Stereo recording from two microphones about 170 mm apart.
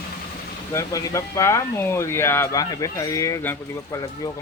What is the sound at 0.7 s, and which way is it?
Speech, 20° left (ahead or behind).